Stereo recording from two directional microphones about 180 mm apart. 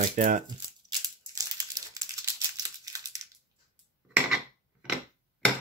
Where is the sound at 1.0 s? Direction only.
20° right (ahead or behind).